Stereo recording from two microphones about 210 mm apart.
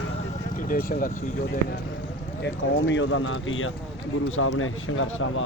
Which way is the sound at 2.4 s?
60° left (ahead or behind).